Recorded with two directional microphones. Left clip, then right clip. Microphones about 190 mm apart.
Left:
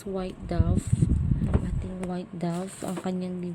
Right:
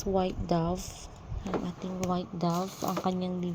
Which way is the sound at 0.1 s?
5° right (ahead or behind).